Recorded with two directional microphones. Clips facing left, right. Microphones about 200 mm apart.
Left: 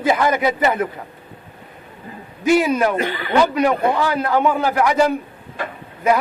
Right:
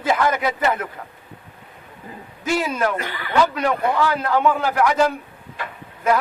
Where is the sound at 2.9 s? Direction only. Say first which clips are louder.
Left 3 dB; 25° left (ahead or behind).